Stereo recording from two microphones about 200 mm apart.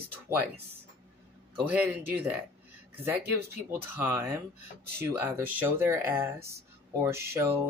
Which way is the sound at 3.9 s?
10° right (ahead or behind).